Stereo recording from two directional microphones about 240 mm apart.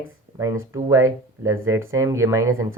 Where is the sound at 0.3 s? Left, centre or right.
Centre.